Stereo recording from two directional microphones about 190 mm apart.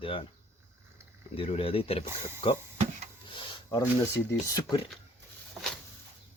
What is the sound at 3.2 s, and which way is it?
Speech, 25° left (ahead or behind).